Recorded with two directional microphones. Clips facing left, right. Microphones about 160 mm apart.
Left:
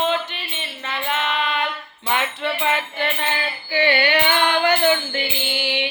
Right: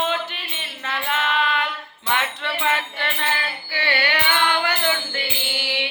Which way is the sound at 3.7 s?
20° left (ahead or behind).